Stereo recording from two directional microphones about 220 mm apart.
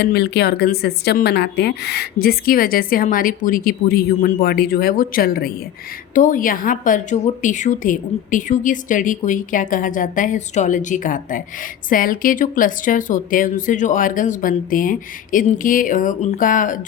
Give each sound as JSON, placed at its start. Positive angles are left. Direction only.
{"t": 0.0, "sound": "a woman's voice", "side_deg": 45}